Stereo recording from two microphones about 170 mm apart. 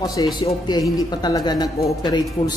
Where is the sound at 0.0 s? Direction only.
20° left (ahead or behind).